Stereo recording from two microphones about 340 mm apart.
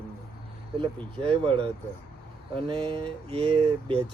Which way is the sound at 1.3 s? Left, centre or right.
Centre.